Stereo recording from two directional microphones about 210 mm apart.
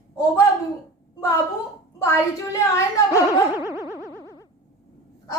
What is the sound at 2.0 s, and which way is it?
A woman's voice, 15° left (ahead or behind).